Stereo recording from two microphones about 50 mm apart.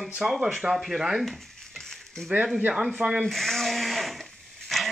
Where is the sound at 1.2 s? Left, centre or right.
Centre.